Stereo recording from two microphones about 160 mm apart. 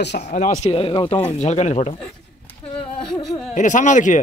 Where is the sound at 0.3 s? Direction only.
55° left (ahead or behind).